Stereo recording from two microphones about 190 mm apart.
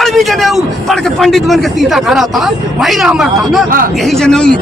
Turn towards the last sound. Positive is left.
turn(degrees=5)  # may be behind; listen again after turning